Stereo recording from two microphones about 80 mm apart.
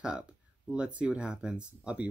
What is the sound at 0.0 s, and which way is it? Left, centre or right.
Speech, centre.